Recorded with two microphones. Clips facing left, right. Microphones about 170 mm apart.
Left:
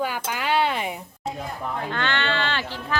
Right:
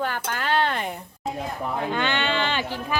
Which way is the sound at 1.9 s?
15° right (ahead or behind).